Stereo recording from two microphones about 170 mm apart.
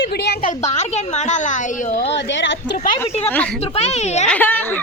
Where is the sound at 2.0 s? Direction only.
90° left.